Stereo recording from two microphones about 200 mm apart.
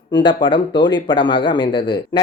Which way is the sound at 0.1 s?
25° left (ahead or behind).